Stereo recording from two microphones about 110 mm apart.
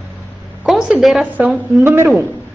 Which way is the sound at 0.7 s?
5° right (ahead or behind).